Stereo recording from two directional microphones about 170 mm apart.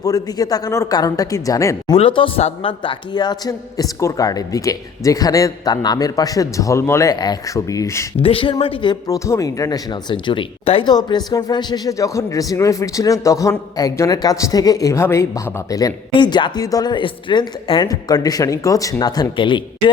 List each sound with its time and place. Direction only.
0.0 s speech: 20° left (ahead or behind)
2.0 s speech: 30° left (ahead or behind)
8.2 s speech: 30° left (ahead or behind)